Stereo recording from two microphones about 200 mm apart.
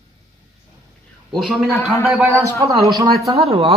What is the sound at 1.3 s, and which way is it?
Speech, centre (ahead or behind).